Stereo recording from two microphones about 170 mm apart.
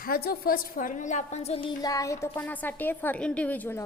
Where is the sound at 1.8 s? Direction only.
20° left (ahead or behind).